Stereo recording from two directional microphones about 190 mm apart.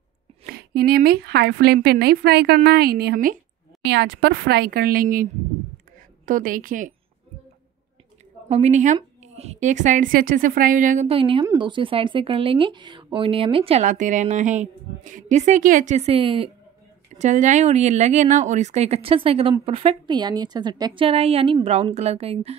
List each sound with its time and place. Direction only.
0.4 s a woman's voice: 55° right (ahead or behind)
8.5 s a woman's voice: 35° right (ahead or behind)
11.1 s a woman's voice: 30° right (ahead or behind)
17.1 s a woman's voice: 40° right (ahead or behind)